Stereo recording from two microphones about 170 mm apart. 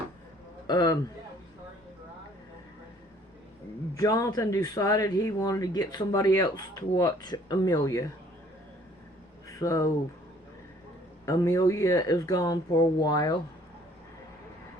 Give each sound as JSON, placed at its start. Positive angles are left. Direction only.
{"t": 0.7, "sound": "a man's voice", "side_deg": 25}
{"t": 3.9, "sound": "speech", "side_deg": 20}
{"t": 9.6, "sound": "speech", "side_deg": 20}
{"t": 11.3, "sound": "speech", "side_deg": 20}